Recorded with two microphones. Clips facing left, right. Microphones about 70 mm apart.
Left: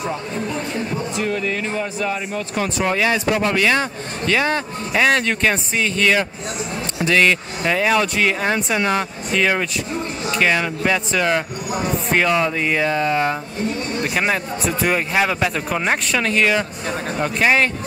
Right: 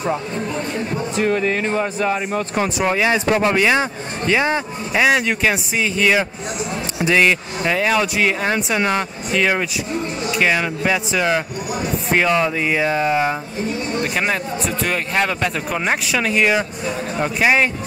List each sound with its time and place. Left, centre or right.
1.1 s speech: right
2.8 s speech: centre
4.9 s speech: centre
13.9 s speech: centre